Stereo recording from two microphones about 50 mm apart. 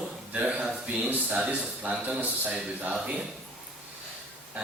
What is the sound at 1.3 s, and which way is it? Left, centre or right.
Speech, right.